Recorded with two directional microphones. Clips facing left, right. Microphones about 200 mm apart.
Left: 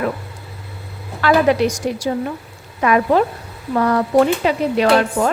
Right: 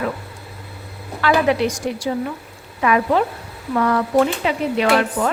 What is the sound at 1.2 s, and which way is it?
Speech, 40° left (ahead or behind).